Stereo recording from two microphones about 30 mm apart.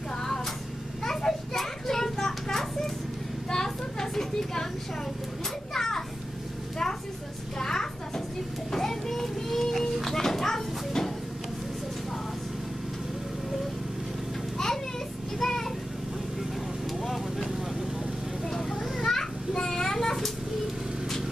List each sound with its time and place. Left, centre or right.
1.0 s children playing: centre
3.4 s a sound: centre
5.7 s children playing: centre
7.5 s a sound: centre
8.7 s children playing: centre
9.2 s music: centre
10.1 s a sound: centre
15.4 s vehicle: centre
17.0 s vehicle: centre
18.4 s a sound: centre
18.9 s children playing: centre
19.6 s child singing: centre